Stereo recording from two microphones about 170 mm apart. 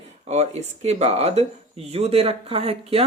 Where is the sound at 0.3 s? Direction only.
40° right (ahead or behind).